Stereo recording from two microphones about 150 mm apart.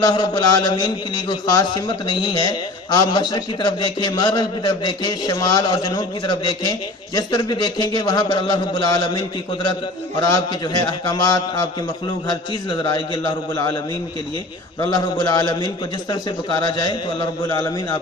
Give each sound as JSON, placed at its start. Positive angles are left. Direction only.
{"t": 0.0, "sound": "a man's voice", "side_deg": 30}
{"t": 14.8, "sound": "a man's voice", "side_deg": 30}